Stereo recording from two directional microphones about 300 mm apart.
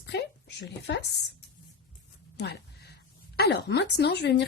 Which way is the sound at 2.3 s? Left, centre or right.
Left.